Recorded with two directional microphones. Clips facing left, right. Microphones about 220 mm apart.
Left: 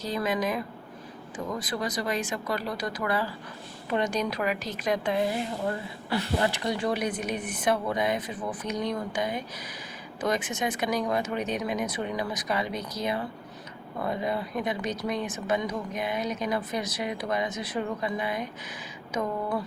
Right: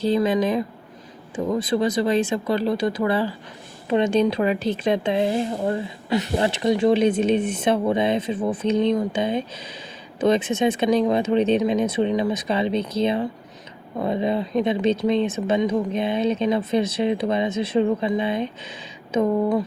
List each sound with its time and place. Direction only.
0.0 s speech: 30° right (ahead or behind)